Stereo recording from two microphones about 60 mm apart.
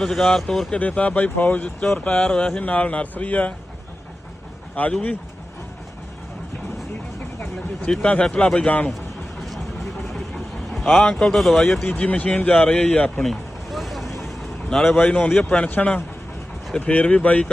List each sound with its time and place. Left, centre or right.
0.0 s speech: centre
0.7 s speech: left
4.7 s speech: centre
7.9 s speech: centre
10.0 s vehicle: centre
11.0 s speech: centre
11.9 s speech: left
13.2 s vehicle: centre
14.7 s speech: centre
15.4 s speech: centre